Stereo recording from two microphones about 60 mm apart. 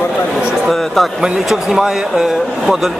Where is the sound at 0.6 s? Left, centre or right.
Centre.